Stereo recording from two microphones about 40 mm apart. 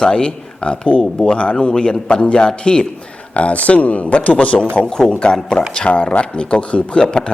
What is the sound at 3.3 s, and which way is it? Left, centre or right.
Speech, left.